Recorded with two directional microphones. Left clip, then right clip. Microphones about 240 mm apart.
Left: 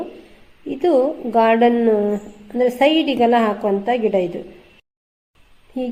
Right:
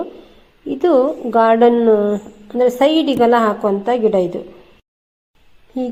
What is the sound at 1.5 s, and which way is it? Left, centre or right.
Speech, right.